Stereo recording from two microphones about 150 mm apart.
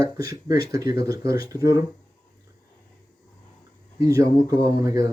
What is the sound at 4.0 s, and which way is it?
Speech, 20° right (ahead or behind).